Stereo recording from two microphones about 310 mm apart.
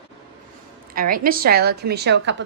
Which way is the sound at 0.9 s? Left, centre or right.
Right.